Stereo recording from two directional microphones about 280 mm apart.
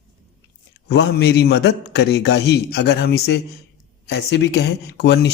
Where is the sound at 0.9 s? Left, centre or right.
Left.